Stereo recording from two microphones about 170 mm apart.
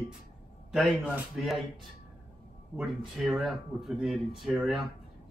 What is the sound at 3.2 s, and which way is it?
Speech, centre (ahead or behind).